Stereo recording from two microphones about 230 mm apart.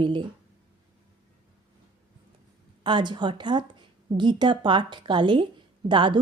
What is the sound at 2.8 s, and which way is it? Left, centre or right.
A woman's voice, centre.